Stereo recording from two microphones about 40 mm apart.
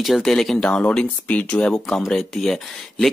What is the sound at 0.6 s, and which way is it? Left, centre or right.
Speech, left.